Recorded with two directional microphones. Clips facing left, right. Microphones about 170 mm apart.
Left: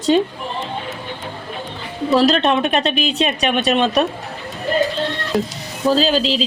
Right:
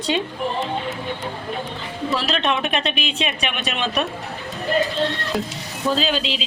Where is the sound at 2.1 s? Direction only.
40° left (ahead or behind).